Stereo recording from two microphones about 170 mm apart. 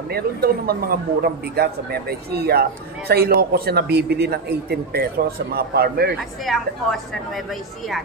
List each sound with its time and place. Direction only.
0.1 s a man's voice: 65° right (ahead or behind)
6.4 s a woman's voice: centre (ahead or behind)